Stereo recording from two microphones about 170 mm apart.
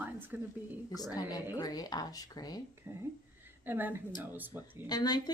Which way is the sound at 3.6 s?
10° right (ahead or behind).